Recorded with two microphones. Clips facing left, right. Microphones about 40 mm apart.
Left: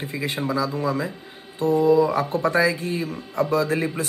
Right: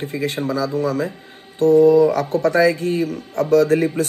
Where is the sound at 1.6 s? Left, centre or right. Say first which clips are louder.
Right 6 dB; right.